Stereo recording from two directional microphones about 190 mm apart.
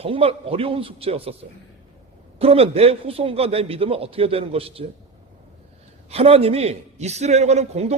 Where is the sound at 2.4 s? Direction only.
30° right (ahead or behind).